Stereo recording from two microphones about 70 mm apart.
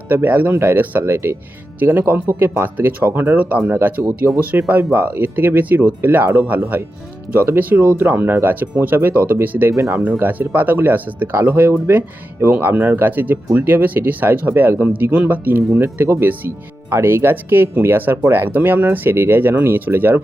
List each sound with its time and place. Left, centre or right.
0.1 s speech: right
14.7 s speech: right
14.9 s speech: right